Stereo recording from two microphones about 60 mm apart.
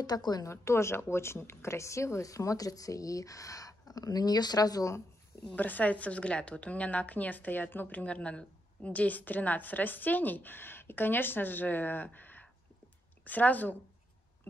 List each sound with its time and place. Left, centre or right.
0.0 s a woman's voice: left
0.5 s a woman's voice: left
5.6 s a woman's voice: left